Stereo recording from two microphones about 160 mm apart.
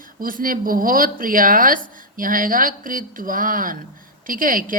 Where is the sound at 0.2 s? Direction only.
60° right (ahead or behind).